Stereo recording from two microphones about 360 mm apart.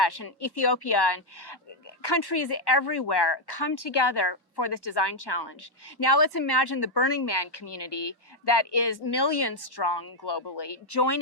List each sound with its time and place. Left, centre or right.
0.0 s speech: left